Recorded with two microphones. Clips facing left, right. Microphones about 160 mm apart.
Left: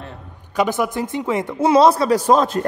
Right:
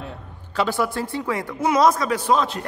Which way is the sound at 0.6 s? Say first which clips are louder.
Left 3 dB; 20° left (ahead or behind).